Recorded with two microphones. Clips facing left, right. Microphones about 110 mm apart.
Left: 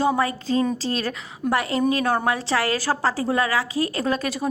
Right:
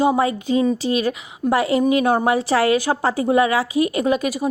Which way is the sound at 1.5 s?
20° right (ahead or behind).